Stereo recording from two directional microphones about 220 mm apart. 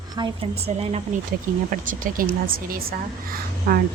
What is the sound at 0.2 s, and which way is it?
Speech, 25° right (ahead or behind).